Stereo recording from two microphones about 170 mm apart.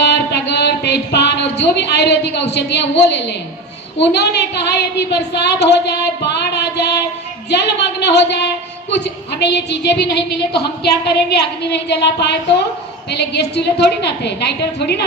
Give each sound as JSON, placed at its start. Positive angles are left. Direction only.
{"t": 0.0, "sound": "a woman's voice", "side_deg": 75}